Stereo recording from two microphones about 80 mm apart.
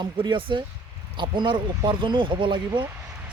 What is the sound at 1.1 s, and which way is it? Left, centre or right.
Speech, right.